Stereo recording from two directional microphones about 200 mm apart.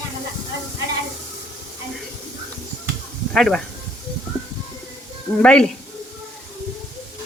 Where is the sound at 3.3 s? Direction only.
Centre (ahead or behind).